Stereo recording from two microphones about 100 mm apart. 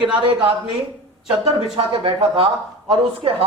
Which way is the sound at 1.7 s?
70° right (ahead or behind).